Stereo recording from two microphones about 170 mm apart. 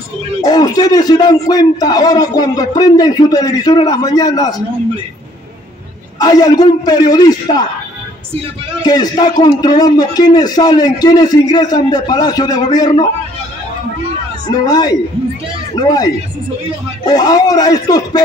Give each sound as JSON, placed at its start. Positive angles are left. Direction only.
{"t": 0.4, "sound": "speech", "side_deg": 20}
{"t": 6.1, "sound": "speech", "side_deg": 25}
{"t": 8.8, "sound": "speech", "side_deg": 25}
{"t": 14.5, "sound": "speech", "side_deg": 25}